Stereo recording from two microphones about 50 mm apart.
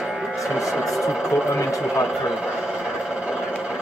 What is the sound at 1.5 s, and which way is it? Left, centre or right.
Speech, left.